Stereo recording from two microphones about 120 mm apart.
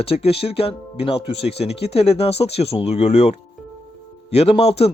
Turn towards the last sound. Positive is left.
turn(degrees=55)  # may be behind; listen again after turning